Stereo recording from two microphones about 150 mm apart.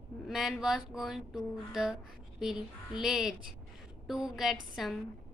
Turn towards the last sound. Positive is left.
turn(degrees=-5)  # may be behind; listen again after turning